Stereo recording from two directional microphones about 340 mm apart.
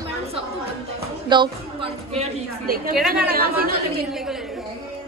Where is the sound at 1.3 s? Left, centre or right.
Centre.